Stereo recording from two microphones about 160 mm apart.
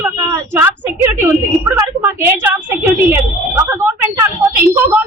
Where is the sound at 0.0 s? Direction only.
15° right (ahead or behind).